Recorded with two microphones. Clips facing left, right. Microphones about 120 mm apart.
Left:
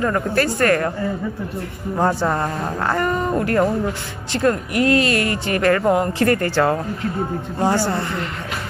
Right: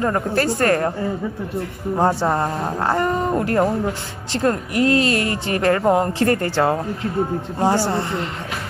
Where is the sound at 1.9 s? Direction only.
30° right (ahead or behind).